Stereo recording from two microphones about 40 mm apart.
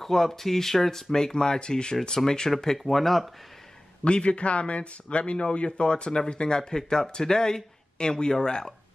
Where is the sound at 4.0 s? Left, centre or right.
Left.